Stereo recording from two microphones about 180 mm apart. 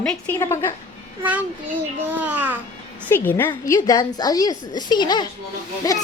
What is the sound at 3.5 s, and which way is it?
A woman's voice, 20° left (ahead or behind).